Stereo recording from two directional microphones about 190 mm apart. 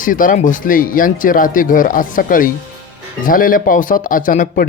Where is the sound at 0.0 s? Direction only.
45° left (ahead or behind).